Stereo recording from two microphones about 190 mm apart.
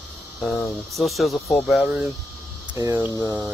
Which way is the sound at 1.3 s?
10° left (ahead or behind).